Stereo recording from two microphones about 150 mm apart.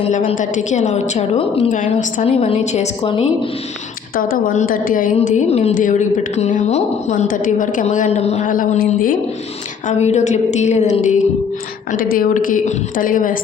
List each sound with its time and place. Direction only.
0.3 s a woman's voice: 55° left (ahead or behind)
1.7 s a woman's voice: 60° left (ahead or behind)
2.3 s a woman's voice: 45° left (ahead or behind)
4.1 s a woman's voice: 65° left (ahead or behind)
10.0 s a woman's voice: 50° left (ahead or behind)
11.9 s a woman's voice: 70° left (ahead or behind)